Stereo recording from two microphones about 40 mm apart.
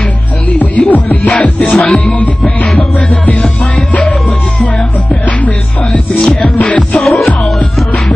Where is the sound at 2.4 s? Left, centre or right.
Centre.